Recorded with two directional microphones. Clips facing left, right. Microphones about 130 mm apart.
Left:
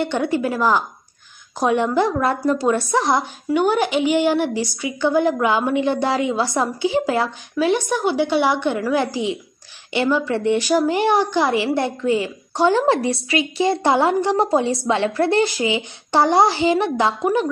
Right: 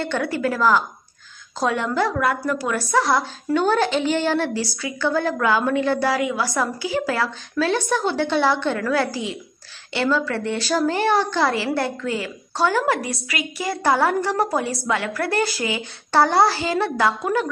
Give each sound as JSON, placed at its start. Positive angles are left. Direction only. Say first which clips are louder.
{"t": 0.0, "sound": "a woman's voice", "louder": "left 3 dB", "side_deg": 20}